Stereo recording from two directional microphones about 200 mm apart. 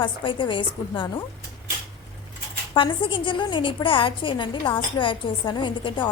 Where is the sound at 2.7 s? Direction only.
25° left (ahead or behind).